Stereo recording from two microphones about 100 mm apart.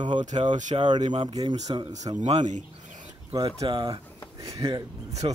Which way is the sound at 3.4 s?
55° right (ahead or behind).